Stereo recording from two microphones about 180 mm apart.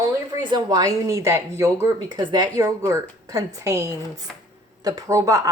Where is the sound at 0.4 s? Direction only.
25° right (ahead or behind).